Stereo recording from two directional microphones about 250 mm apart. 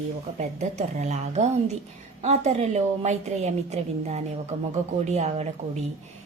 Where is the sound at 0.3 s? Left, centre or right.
Right.